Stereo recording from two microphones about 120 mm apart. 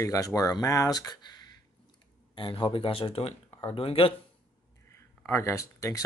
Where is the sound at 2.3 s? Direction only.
45° left (ahead or behind).